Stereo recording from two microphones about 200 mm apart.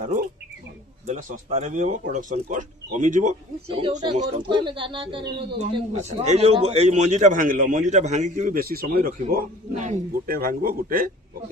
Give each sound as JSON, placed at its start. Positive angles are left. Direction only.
{"t": 1.0, "sound": "speech", "side_deg": -35}
{"t": 4.4, "sound": "speech", "side_deg": -25}